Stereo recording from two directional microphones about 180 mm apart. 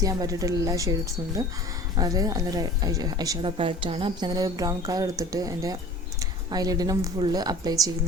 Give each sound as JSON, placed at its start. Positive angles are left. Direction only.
{"t": 0.0, "sound": "speech", "side_deg": -20}